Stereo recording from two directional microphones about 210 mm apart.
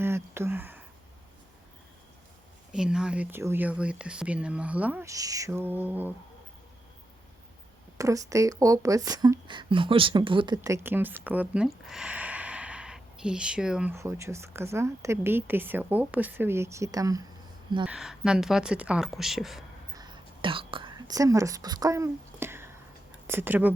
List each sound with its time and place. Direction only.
0.0 s a sound: 10° right (ahead or behind)
2.7 s speech: 5° right (ahead or behind)
7.9 s speech: 15° right (ahead or behind)
17.8 s speech: 5° right (ahead or behind)
20.0 s whispering: 20° right (ahead or behind)
23.2 s speech: 10° right (ahead or behind)